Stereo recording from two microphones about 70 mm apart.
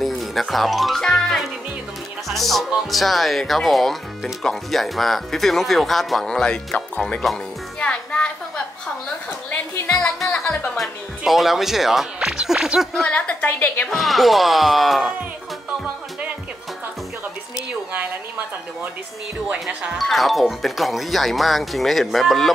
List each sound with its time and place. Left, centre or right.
0.0 s music: centre
2.9 s speech: centre
7.8 s a sound: centre
9.8 s music: centre
10.8 s speech: centre
12.9 s a woman's voice: centre
13.8 s speech: centre
20.0 s speech: centre